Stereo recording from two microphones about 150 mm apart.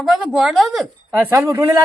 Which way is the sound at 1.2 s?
15° right (ahead or behind).